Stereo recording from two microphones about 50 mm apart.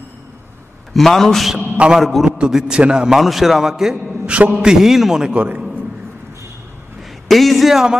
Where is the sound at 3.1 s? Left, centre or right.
Centre.